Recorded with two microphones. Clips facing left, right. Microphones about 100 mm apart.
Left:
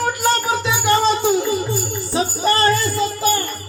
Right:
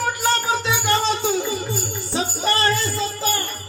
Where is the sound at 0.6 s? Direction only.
10° left (ahead or behind).